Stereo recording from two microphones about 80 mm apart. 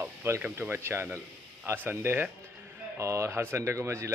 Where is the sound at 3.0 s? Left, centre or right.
Right.